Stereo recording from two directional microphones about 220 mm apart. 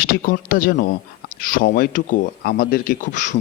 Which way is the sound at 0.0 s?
40° left (ahead or behind).